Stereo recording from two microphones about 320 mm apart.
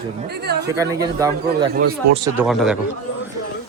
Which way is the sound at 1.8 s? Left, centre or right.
Right.